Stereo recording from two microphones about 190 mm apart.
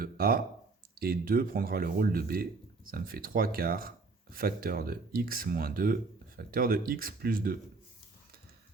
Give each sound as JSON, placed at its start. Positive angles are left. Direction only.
{"t": 0.0, "sound": "speech", "side_deg": -50}